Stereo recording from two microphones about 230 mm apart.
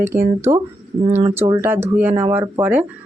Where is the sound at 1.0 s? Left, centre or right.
Right.